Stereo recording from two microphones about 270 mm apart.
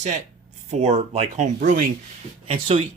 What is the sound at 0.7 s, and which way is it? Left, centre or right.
Speech, right.